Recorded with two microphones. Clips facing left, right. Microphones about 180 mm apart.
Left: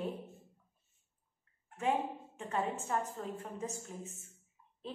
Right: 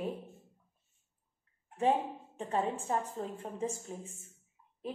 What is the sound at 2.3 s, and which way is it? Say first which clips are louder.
A woman's voice: right 3 dB; 30° right (ahead or behind).